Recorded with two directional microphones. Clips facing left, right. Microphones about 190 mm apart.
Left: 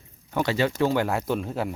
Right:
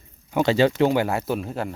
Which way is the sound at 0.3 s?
20° right (ahead or behind).